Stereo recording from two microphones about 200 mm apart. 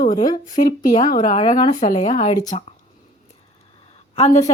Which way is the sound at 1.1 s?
40° left (ahead or behind).